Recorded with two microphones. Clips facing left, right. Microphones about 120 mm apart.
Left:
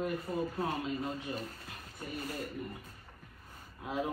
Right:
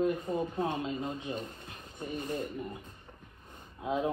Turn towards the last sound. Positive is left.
turn(degrees=-20)  # may be behind; listen again after turning